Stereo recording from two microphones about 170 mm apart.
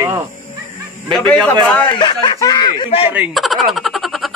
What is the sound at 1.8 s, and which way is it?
Speech, 30° left (ahead or behind).